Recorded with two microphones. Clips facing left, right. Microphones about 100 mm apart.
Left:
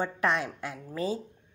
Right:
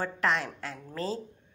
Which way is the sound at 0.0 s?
20° left (ahead or behind).